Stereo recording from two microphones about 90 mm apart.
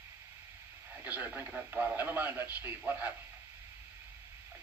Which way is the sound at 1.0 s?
20° right (ahead or behind).